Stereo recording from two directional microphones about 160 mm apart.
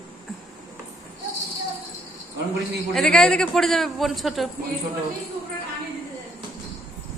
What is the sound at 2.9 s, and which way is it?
A man's voice, 5° left (ahead or behind).